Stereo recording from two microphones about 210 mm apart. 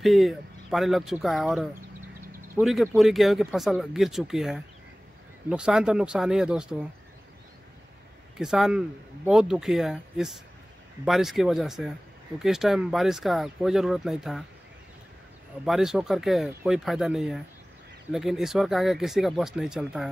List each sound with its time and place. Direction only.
0.0 s speech: centre (ahead or behind)
8.4 s speech: centre (ahead or behind)
15.6 s speech: centre (ahead or behind)